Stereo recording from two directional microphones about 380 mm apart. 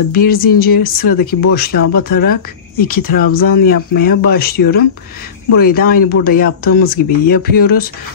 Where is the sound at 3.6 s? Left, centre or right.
Left.